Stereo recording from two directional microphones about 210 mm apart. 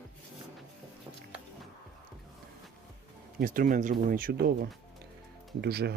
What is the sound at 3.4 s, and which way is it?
Speech, 40° right (ahead or behind).